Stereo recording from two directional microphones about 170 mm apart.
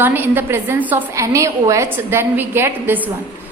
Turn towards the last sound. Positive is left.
turn(degrees=-10)  # may be behind; listen again after turning